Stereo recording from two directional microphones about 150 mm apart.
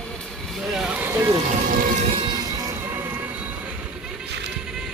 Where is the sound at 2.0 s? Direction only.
35° right (ahead or behind).